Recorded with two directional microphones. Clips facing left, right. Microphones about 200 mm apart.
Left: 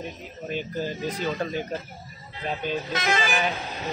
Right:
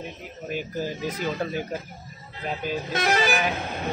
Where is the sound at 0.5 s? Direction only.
10° right (ahead or behind).